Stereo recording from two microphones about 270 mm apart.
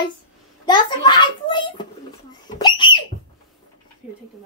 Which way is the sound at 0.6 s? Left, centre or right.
Centre.